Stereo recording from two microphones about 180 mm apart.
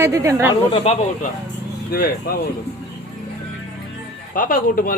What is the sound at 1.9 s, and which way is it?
Speech, 55° left (ahead or behind).